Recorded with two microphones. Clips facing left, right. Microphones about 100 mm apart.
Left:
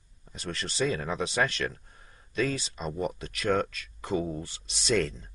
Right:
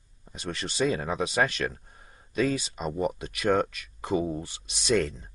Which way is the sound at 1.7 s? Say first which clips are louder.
Right 1 dB; 25° right (ahead or behind).